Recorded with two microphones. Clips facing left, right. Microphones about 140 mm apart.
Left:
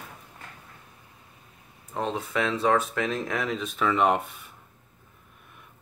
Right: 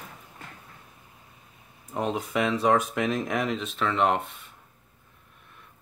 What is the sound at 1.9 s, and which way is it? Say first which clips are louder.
Speech: right 1 dB; 5° right (ahead or behind).